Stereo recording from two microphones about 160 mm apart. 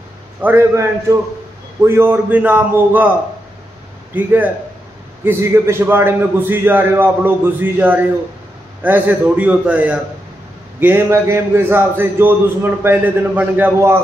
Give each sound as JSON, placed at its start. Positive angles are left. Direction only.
{"t": 0.4, "sound": "a man's voice", "side_deg": -15}
{"t": 4.1, "sound": "a man's voice", "side_deg": -10}